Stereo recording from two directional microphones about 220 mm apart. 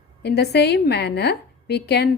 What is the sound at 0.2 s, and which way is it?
A woman's voice, 50° left (ahead or behind).